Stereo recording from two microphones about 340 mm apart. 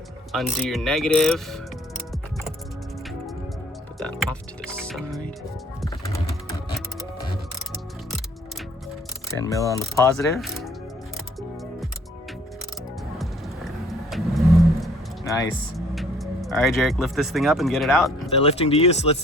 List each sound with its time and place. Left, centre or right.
0.3 s speech: centre
3.9 s speech: centre
5.8 s typing: centre
9.4 s speech: centre
14.1 s vehicle: centre
16.0 s speech: centre
18.4 s speech: centre